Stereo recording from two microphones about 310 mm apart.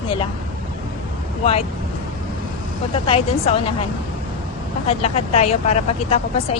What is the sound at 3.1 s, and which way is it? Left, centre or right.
Speech, centre.